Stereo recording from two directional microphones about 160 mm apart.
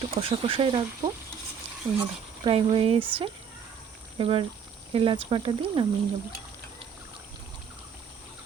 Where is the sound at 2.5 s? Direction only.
35° right (ahead or behind).